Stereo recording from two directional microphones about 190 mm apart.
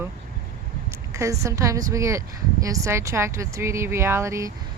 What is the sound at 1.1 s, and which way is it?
Speech, 15° right (ahead or behind).